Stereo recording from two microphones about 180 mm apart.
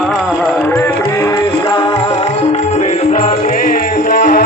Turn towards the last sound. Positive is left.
turn(degrees=50)  # may be behind; listen again after turning